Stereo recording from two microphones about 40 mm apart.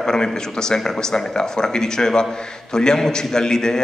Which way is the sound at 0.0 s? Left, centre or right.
Centre.